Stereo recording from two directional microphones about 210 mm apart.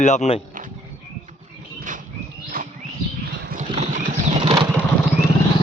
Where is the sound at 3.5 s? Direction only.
35° right (ahead or behind).